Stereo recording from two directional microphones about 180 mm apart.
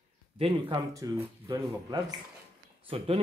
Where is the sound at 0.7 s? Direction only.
20° right (ahead or behind).